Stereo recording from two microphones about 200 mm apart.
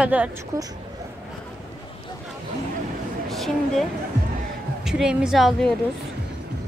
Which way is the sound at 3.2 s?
Centre (ahead or behind).